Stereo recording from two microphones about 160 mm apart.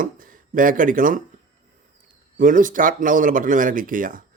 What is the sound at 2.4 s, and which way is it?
Speech, 55° right (ahead or behind).